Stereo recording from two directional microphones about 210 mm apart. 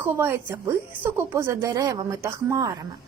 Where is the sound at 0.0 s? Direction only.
10° right (ahead or behind).